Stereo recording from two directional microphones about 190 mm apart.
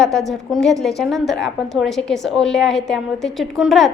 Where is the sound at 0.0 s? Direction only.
Centre (ahead or behind).